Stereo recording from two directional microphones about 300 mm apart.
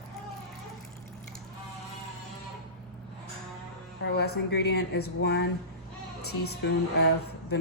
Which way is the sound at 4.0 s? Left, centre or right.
Left.